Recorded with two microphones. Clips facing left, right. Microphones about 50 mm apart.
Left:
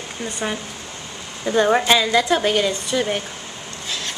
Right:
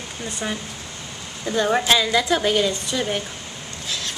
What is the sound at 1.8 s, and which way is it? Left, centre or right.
A woman's voice, centre.